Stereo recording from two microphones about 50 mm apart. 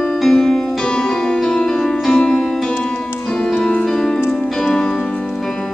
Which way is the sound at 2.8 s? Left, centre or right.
Centre.